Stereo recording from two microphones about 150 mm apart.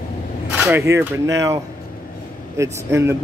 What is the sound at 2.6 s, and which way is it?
Speech, 20° right (ahead or behind).